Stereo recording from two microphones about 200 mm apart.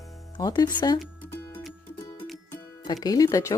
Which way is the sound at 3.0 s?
20° left (ahead or behind).